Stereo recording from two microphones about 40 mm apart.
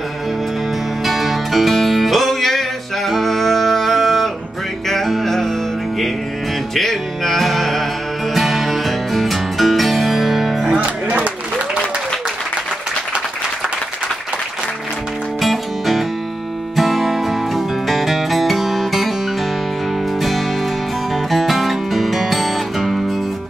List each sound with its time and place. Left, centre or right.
1.0 s music: centre
6.7 s music: centre
10.8 s music: right
15.4 s music: centre
20.2 s music: centre